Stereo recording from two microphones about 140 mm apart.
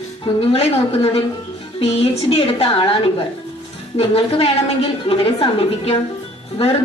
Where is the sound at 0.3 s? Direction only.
45° left (ahead or behind).